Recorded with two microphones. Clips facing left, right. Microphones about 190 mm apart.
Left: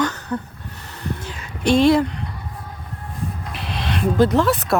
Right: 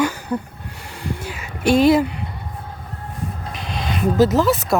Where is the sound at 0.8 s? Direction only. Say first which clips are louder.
Right 1 dB; 10° right (ahead or behind).